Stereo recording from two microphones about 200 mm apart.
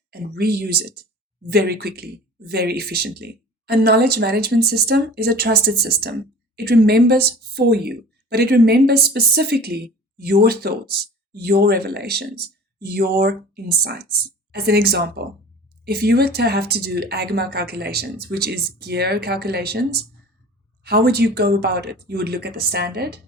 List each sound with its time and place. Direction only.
0.1 s speech: 50° right (ahead or behind)